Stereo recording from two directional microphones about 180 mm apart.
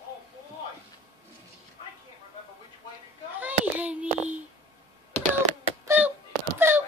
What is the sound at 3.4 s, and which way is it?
Child singing, 10° right (ahead or behind).